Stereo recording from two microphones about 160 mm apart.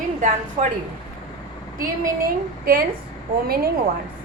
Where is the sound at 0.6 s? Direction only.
50° right (ahead or behind).